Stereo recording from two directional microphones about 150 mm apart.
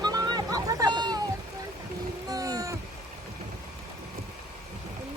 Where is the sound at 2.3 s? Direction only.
25° right (ahead or behind).